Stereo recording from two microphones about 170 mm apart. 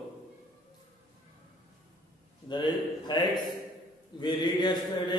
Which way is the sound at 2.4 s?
25° left (ahead or behind).